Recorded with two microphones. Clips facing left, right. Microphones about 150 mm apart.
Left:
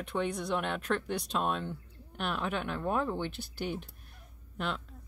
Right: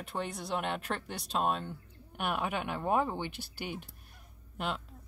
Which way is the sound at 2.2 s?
10° right (ahead or behind).